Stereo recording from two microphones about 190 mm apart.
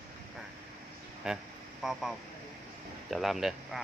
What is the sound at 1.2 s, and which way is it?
Speech, 5° right (ahead or behind).